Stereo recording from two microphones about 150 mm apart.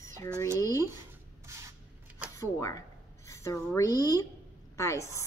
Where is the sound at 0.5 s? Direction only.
25° left (ahead or behind).